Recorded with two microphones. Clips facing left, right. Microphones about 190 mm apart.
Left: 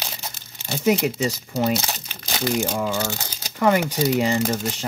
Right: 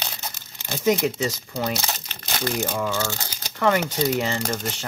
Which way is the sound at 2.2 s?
10° left (ahead or behind).